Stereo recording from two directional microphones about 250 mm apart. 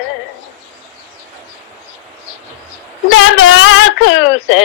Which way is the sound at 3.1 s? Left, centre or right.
Left.